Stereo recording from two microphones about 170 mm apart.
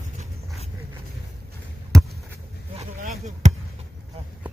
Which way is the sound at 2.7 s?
40° right (ahead or behind).